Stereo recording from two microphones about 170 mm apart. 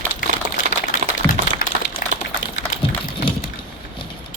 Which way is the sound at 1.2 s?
20° left (ahead or behind).